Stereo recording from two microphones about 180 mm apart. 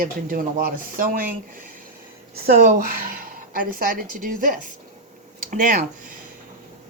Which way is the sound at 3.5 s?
50° right (ahead or behind).